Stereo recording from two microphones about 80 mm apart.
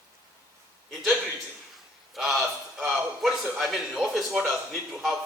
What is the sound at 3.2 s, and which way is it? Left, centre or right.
A man's voice, centre.